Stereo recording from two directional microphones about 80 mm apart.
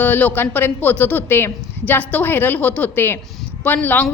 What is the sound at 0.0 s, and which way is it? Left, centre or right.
A woman's voice, left.